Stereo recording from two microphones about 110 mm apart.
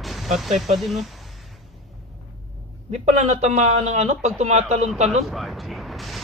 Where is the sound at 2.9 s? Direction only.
90° right.